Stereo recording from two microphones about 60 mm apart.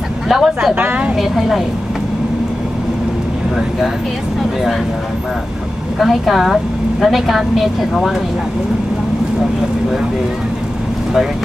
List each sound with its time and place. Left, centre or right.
0.3 s a woman's voice: centre
0.7 s a woman's voice: right
1.1 s a woman's voice: centre
5.9 s a woman's voice: centre